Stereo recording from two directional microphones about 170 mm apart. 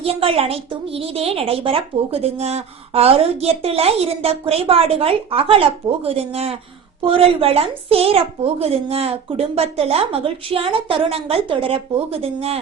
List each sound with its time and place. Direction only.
0.0 s a child's voice: 35° right (ahead or behind)